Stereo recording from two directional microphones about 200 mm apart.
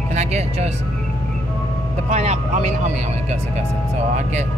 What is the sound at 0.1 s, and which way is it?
Speech, 35° right (ahead or behind).